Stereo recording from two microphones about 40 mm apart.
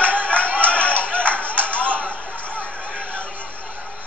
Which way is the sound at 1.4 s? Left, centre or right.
Right.